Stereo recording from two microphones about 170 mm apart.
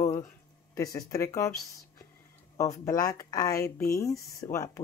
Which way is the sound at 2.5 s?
20° left (ahead or behind).